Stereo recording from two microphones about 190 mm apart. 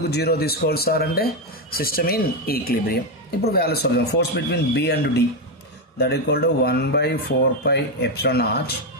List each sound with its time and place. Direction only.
0.1 s a man's voice: 55° left (ahead or behind)